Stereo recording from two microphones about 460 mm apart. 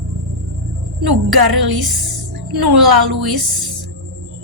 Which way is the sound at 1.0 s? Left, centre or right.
Right.